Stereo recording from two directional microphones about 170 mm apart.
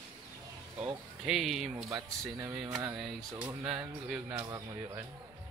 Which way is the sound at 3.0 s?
5° right (ahead or behind).